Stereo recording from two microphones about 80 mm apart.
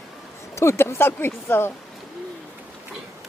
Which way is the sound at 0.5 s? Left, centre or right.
Left.